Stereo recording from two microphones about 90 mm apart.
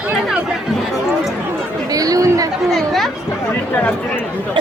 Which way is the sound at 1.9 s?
40° right (ahead or behind).